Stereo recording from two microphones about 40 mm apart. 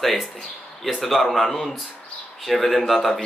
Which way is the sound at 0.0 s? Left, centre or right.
Centre.